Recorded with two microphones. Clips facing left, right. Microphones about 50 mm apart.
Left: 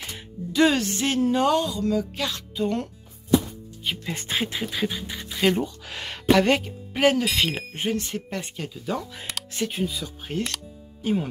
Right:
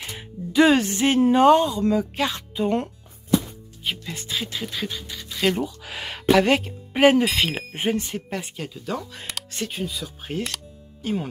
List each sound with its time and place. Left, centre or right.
0.0 s speech: centre
3.9 s speech: centre
4.2 s a sound: left
4.5 s music: centre
5.6 s speech: centre
6.9 s speech: centre